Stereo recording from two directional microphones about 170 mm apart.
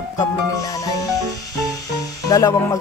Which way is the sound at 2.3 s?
20° left (ahead or behind).